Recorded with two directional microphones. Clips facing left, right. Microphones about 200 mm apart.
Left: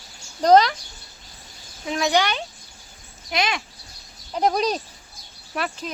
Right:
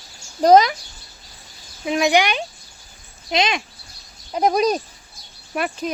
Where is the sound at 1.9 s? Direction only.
15° right (ahead or behind).